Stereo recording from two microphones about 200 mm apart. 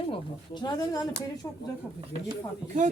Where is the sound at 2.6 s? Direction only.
40° right (ahead or behind).